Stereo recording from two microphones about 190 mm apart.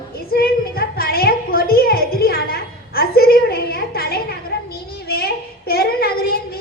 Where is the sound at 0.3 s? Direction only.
50° left (ahead or behind).